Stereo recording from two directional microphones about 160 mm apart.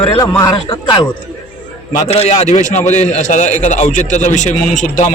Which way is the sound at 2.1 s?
45° left (ahead or behind).